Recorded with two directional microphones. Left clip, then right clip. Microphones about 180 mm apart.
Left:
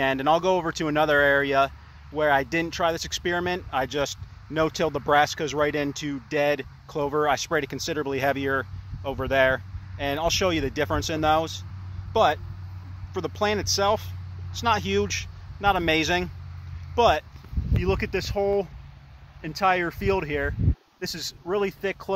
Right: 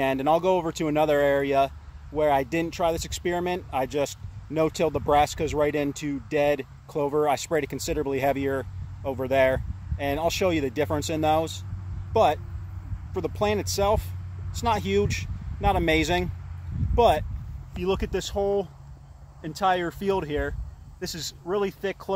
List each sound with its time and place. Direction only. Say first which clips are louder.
0.0 s speech: left 1 dB; centre (ahead or behind)
17.7 s speech: left 1 dB; 15° left (ahead or behind)
18.3 s speech: left 1 dB; 30° left (ahead or behind)